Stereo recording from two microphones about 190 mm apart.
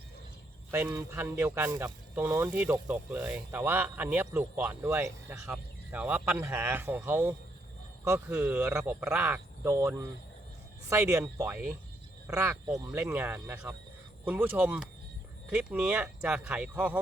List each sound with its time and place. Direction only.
0.7 s speech: 15° right (ahead or behind)